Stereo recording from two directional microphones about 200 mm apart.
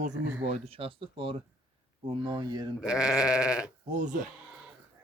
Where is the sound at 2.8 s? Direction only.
5° right (ahead or behind).